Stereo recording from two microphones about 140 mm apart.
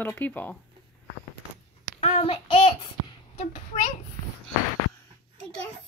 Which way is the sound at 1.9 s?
50° left (ahead or behind).